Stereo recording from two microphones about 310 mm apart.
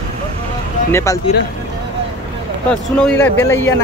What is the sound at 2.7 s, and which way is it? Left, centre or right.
Speech, centre.